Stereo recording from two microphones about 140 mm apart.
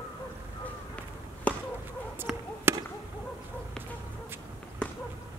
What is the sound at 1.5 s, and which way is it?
Chop, 10° left (ahead or behind).